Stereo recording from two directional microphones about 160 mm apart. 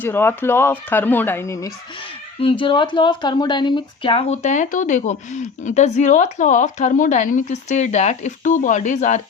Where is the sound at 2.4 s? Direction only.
30° left (ahead or behind).